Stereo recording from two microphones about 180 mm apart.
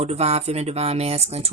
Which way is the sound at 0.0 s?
35° right (ahead or behind).